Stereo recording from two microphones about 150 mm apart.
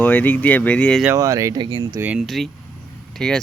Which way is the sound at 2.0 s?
10° right (ahead or behind).